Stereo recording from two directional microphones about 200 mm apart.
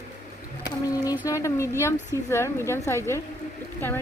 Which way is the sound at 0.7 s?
15° left (ahead or behind).